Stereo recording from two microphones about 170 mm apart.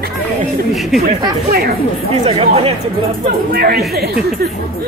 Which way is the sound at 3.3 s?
65° right (ahead or behind).